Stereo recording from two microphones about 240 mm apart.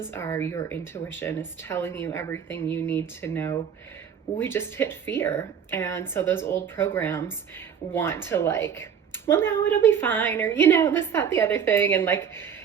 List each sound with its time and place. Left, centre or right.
0.0 s a woman's voice: centre